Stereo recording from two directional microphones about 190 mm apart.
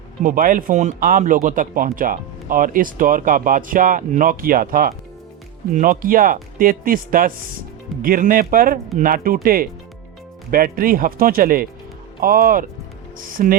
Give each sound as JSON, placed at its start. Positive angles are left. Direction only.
{"t": 0.2, "sound": "speech", "side_deg": -45}